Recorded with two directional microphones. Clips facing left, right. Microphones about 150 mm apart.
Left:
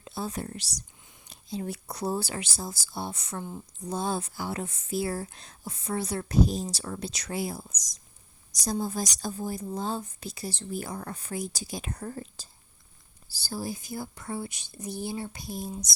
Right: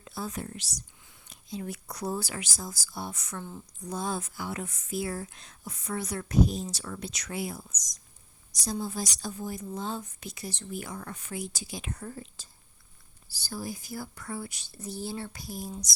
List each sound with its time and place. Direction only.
0.0 s speech: 25° left (ahead or behind)
1.0 s whispering: 20° left (ahead or behind)
1.3 s speech: 30° left (ahead or behind)
3.4 s a woman's voice: 15° left (ahead or behind)
3.8 s speech: 30° left (ahead or behind)
13.3 s speech: 30° left (ahead or behind)